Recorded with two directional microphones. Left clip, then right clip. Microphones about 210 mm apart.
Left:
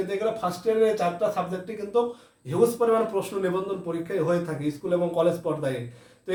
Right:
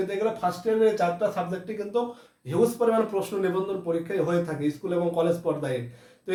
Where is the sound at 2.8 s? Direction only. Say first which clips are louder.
Left 1 dB; 15° right (ahead or behind).